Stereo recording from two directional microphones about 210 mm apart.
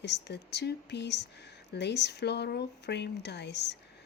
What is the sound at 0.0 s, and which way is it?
Speech, 55° left (ahead or behind).